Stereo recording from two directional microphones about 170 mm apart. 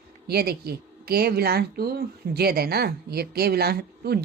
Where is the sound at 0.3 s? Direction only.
70° right (ahead or behind).